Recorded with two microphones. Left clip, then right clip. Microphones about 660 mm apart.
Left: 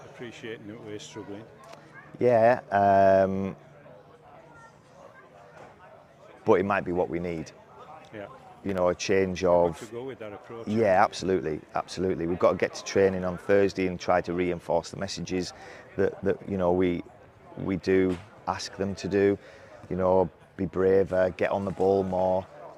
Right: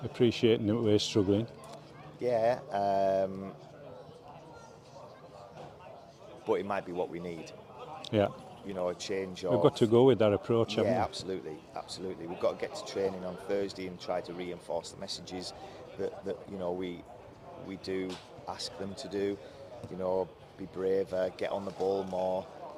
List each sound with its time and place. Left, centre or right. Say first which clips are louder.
0.2 s speech: right 13 dB; right
2.2 s speech: left 8 dB; left
6.4 s speech: left 9 dB; left
8.1 s speech: right 13 dB; right
8.7 s speech: left 9 dB; left
9.9 s speech: right 14 dB; right
10.8 s speech: left 9 dB; left